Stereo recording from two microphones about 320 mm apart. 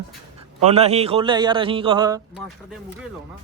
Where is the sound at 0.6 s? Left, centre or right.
Centre.